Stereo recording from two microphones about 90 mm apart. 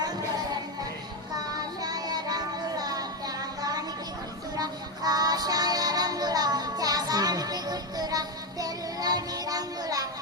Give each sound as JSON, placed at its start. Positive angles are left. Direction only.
{"t": 0.0, "sound": "music", "side_deg": -50}
{"t": 1.8, "sound": "child singing", "side_deg": -45}
{"t": 4.5, "sound": "music", "side_deg": -45}